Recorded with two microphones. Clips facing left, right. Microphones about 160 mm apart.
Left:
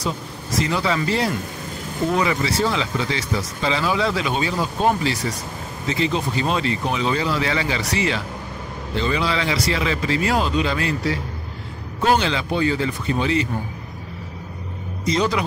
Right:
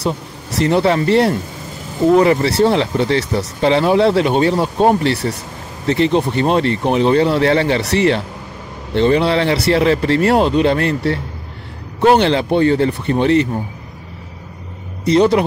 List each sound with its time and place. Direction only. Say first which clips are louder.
0.0 s speech: right 6 dB; 65° right (ahead or behind)
15.0 s speech: right 9 dB; 60° right (ahead or behind)